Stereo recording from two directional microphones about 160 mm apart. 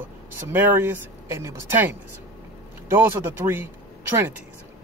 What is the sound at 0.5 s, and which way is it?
Speech, 10° right (ahead or behind).